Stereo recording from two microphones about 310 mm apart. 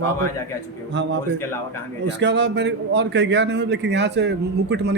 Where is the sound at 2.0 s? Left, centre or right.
Right.